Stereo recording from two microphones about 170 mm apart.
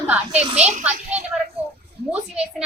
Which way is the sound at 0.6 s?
40° right (ahead or behind).